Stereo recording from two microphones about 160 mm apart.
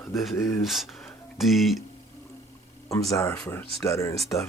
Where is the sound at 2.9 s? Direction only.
20° left (ahead or behind).